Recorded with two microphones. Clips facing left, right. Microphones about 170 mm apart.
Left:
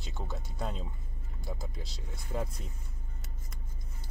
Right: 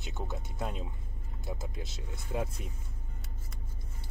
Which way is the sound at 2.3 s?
10° right (ahead or behind).